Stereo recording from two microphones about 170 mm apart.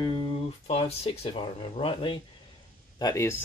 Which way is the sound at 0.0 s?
25° left (ahead or behind).